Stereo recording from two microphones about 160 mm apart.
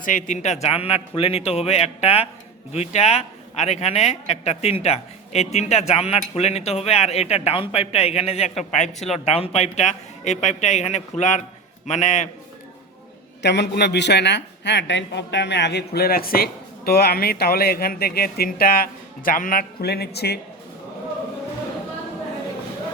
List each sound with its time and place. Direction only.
0.0 s a man's voice: 55° left (ahead or behind)
13.4 s a man's voice: 90° left